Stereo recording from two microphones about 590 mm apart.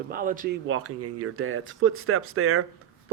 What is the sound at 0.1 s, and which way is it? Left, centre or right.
Speech, centre.